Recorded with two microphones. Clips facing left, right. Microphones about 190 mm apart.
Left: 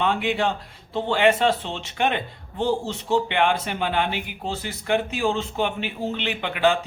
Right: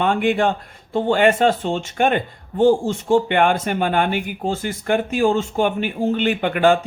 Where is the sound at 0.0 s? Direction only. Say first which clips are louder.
Right 5 dB; 50° right (ahead or behind).